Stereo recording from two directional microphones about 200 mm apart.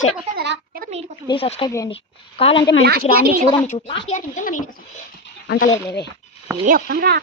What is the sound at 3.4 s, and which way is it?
Speech, 25° left (ahead or behind).